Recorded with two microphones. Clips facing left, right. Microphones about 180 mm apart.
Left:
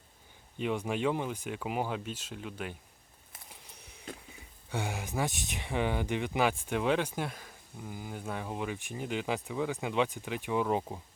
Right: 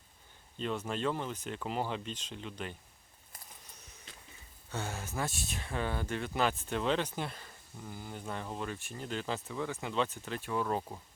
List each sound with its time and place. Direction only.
0.5 s speech: 15° left (ahead or behind)
4.1 s a sound: 50° left (ahead or behind)
4.7 s speech: 15° left (ahead or behind)